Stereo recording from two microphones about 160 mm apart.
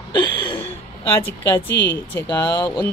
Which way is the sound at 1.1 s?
15° left (ahead or behind).